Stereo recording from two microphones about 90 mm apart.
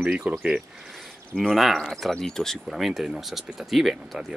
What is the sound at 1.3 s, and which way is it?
Speech, 5° left (ahead or behind).